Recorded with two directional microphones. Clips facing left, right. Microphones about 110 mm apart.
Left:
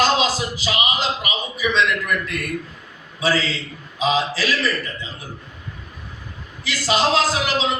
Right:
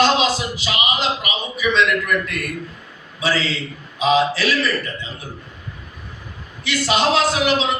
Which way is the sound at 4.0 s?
35° left (ahead or behind).